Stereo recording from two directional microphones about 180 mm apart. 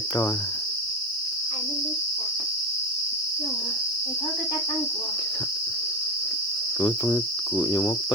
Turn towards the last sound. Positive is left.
turn(degrees=25)  # may be behind; listen again after turning